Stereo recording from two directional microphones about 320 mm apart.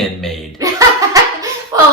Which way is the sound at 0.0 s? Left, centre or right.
Centre.